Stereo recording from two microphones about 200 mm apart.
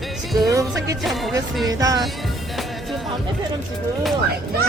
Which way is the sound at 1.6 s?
20° right (ahead or behind).